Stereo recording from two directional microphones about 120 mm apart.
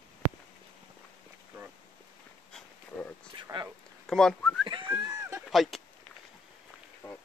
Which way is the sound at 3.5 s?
45° right (ahead or behind).